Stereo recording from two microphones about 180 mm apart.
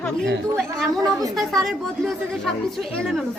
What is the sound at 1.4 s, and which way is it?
A woman's voice, centre (ahead or behind).